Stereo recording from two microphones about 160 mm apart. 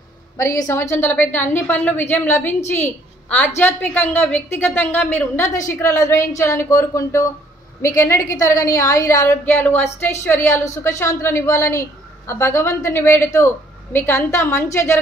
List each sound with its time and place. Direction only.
0.4 s a woman's voice: 20° left (ahead or behind)